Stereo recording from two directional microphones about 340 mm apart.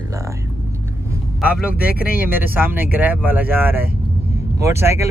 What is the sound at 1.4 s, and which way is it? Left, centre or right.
Speech, centre.